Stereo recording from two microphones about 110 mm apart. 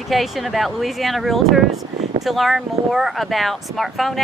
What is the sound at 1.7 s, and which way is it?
Speech, 90° right.